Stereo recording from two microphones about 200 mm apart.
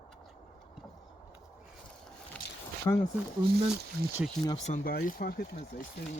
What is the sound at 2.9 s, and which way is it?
Speech, 15° left (ahead or behind).